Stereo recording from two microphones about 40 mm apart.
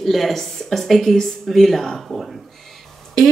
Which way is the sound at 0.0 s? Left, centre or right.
Centre.